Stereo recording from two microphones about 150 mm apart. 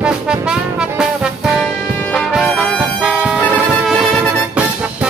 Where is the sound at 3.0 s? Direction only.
5° right (ahead or behind).